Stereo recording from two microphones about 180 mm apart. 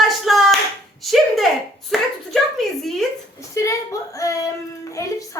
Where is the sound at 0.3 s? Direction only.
Centre (ahead or behind).